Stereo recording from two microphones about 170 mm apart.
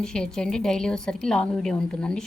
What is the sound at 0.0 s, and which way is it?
A woman's voice, 5° left (ahead or behind).